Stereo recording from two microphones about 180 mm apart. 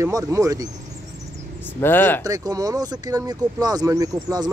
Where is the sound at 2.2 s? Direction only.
20° right (ahead or behind).